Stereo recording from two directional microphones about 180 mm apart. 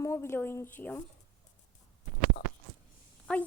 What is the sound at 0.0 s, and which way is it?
Speech, 15° left (ahead or behind).